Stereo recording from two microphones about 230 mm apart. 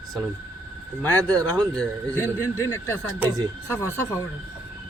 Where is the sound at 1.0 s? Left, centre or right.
Centre.